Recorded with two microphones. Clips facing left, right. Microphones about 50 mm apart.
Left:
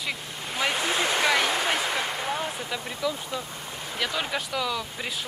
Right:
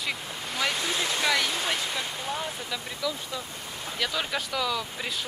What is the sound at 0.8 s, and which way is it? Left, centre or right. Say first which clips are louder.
Speech: left 3 dB; left.